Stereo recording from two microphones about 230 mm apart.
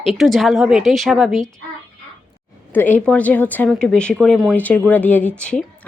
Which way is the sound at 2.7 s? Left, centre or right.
Centre.